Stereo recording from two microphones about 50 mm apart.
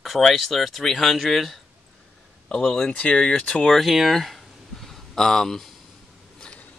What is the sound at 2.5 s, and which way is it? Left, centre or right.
Speech, centre.